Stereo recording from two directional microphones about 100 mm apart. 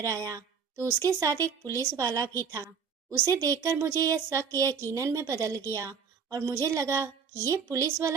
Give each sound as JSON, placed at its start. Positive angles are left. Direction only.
{"t": 0.0, "sound": "speech", "side_deg": -35}